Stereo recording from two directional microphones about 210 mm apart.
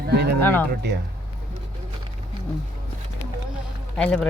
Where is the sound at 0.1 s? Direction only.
50° right (ahead or behind).